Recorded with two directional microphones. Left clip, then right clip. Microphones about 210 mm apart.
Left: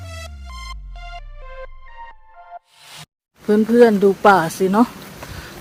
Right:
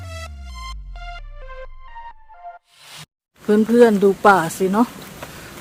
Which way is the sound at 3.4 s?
Centre (ahead or behind).